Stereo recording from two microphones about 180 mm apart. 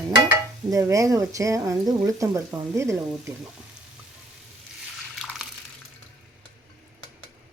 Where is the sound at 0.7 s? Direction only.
15° right (ahead or behind).